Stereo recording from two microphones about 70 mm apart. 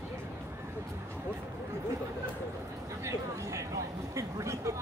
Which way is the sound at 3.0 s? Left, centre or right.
Right.